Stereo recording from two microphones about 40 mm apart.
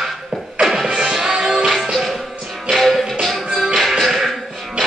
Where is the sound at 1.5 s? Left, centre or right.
Centre.